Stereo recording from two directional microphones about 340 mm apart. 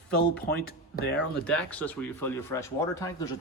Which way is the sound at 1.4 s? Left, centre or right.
Centre.